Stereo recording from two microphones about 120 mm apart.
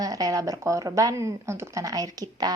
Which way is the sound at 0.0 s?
30° right (ahead or behind).